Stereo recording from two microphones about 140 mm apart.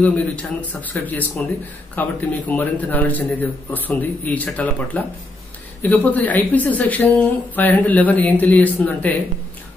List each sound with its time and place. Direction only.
0.0 s speech: 10° left (ahead or behind)